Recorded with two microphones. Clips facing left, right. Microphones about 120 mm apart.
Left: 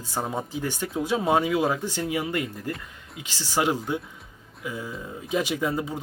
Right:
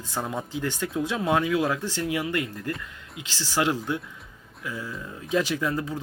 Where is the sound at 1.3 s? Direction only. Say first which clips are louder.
Left 1 dB; 35° left (ahead or behind).